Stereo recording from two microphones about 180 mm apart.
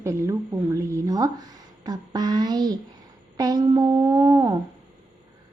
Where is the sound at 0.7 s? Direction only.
20° right (ahead or behind).